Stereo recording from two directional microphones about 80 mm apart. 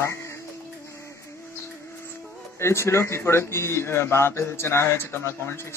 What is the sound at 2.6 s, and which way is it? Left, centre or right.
Speech, left.